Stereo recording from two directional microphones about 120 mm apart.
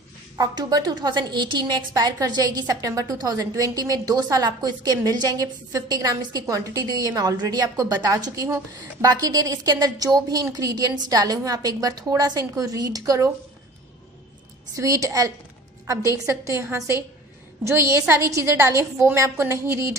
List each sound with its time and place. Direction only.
0.4 s a woman's voice: 30° right (ahead or behind)
14.8 s a woman's voice: 25° right (ahead or behind)